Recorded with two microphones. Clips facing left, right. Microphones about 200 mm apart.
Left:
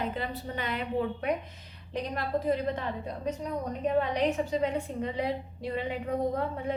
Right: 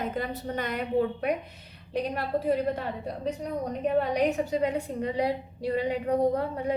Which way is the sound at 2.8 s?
35° right (ahead or behind).